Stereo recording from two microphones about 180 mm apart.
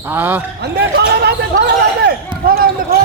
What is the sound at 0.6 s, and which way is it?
Speech, 65° right (ahead or behind).